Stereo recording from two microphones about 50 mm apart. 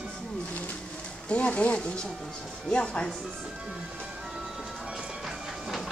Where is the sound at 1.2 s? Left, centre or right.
Left.